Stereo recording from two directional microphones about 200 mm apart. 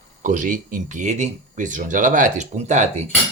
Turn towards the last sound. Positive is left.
turn(degrees=-35)  # may be behind; listen again after turning